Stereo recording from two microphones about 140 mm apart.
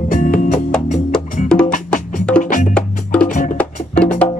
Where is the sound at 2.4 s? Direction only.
65° left (ahead or behind).